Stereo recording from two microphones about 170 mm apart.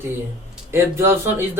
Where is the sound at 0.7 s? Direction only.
15° right (ahead or behind).